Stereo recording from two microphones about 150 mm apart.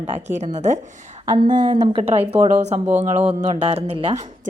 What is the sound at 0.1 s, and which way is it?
Speech, 50° right (ahead or behind).